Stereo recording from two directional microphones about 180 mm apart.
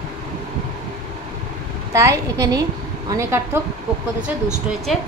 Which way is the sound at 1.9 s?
20° right (ahead or behind).